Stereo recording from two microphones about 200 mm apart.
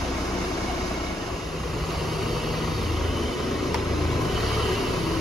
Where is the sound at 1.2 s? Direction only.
Centre (ahead or behind).